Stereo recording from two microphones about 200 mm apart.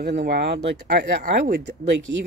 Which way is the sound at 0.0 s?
55° right (ahead or behind).